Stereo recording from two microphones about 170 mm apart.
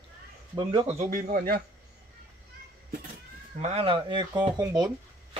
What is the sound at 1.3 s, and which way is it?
Speech, 60° right (ahead or behind).